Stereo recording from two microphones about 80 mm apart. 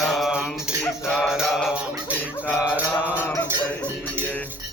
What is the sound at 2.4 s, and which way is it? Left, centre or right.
Mantra, centre.